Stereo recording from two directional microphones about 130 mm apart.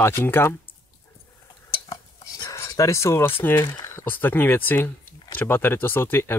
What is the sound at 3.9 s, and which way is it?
Speech, 15° left (ahead or behind).